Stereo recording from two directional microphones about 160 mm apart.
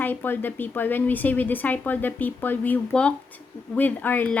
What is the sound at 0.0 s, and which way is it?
Speech, 10° left (ahead or behind).